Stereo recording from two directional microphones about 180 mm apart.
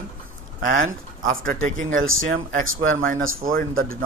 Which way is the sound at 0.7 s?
50° right (ahead or behind).